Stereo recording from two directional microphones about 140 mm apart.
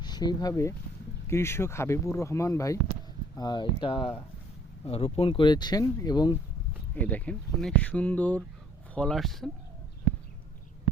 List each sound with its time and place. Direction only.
0.0 s speech: 30° left (ahead or behind)
6.9 s speech: 10° left (ahead or behind)